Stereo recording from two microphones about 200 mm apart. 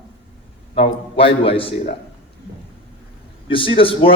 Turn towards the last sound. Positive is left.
turn(degrees=25)  # may be behind; listen again after turning